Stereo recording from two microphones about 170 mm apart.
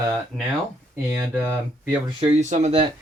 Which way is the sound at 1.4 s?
10° right (ahead or behind).